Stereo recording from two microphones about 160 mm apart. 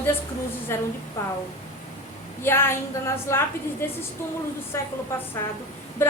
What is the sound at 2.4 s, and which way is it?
A woman's voice, 15° left (ahead or behind).